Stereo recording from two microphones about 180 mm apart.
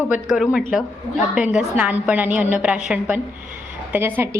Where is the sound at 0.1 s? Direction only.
Centre (ahead or behind).